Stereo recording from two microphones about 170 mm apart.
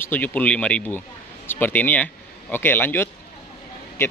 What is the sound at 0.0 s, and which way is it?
Speech, 10° left (ahead or behind).